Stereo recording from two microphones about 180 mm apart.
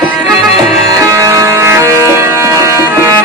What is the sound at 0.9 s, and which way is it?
Music, 15° right (ahead or behind).